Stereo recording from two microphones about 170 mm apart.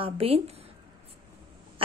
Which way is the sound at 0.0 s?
35° right (ahead or behind).